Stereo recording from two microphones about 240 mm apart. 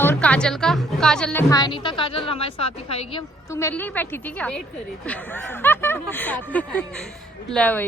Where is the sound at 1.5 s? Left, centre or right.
Centre.